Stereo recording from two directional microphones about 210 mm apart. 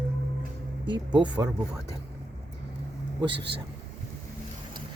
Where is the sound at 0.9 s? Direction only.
20° right (ahead or behind).